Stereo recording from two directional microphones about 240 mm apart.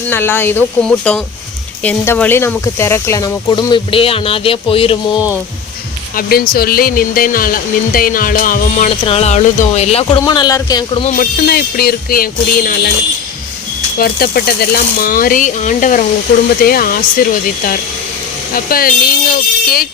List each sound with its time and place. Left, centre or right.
0.1 s speech: centre
6.1 s speech: left; by 11.0 s centre
11.0 s speech: left
14.0 s speech: left
18.5 s speech: left